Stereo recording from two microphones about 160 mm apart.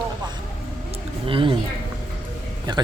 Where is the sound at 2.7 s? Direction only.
25° right (ahead or behind).